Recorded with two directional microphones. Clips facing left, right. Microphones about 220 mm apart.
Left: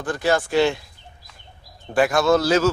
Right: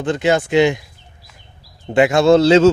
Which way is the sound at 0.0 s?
25° right (ahead or behind).